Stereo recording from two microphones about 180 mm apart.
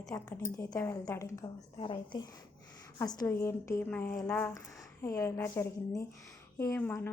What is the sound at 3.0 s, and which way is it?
A woman's voice, 15° left (ahead or behind).